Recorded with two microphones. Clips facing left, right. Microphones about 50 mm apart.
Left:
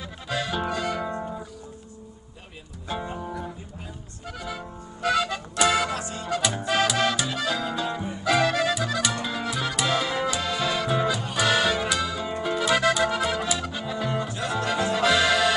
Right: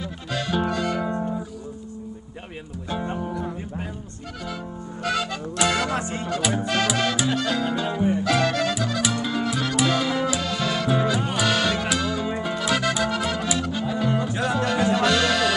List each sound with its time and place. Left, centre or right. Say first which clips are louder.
0.3 s music: right 2 dB; centre
5.0 s music: left 2 dB; centre
5.9 s music: right 5 dB; right
6.2 s music: left 1 dB; centre
12.3 s music: right 1 dB; centre
12.5 s music: left 3 dB; centre
14.4 s music: right 4 dB; centre
15.0 s accordion: even; centre